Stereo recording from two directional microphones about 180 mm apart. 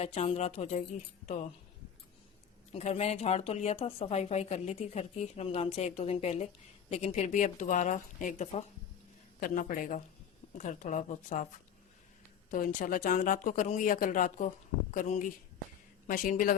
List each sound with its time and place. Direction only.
0.0 s speech: 35° left (ahead or behind)
2.7 s speech: 35° left (ahead or behind)
12.5 s speech: 50° left (ahead or behind)